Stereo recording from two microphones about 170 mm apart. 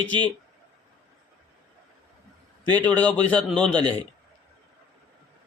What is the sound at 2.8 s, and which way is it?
A man's voice, 10° left (ahead or behind).